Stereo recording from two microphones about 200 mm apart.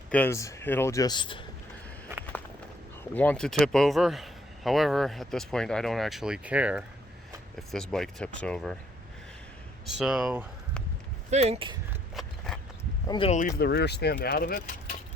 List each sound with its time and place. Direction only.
0.1 s speech: 10° left (ahead or behind)
3.0 s speech: 10° left (ahead or behind)
9.8 s speech: 5° right (ahead or behind)
11.3 s speech: 30° right (ahead or behind)
12.5 s a sound: centre (ahead or behind)
13.1 s speech: 25° left (ahead or behind)
13.6 s speech: 55° left (ahead or behind)